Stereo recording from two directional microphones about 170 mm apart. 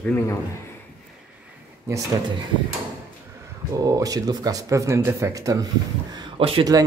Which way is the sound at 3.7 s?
20° right (ahead or behind).